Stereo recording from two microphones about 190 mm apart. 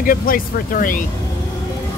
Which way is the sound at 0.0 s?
45° left (ahead or behind).